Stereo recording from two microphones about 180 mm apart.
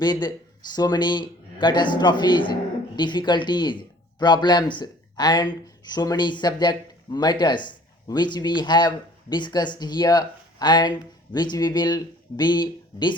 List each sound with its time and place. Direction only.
0.0 s speech: 25° left (ahead or behind)